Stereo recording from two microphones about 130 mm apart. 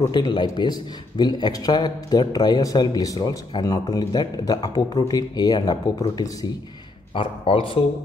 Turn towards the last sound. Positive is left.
turn(degrees=45)  # may be behind; listen again after turning